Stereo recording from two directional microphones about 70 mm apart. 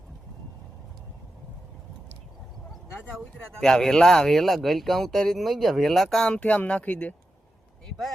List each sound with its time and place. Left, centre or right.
3.1 s speech: centre
6.3 s speech: centre